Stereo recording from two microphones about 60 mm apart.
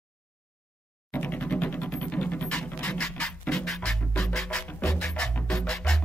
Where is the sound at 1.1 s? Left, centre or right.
Left.